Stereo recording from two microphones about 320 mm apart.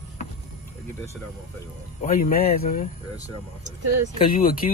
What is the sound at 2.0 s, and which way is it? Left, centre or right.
Speech, left.